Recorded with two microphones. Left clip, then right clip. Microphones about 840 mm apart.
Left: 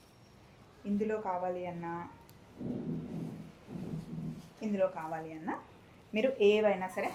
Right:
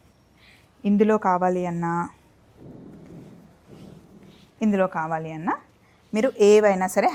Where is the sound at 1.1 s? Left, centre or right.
Right.